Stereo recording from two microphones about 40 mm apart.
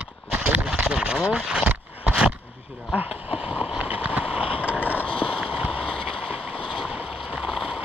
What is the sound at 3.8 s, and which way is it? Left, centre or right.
Vehicle, right.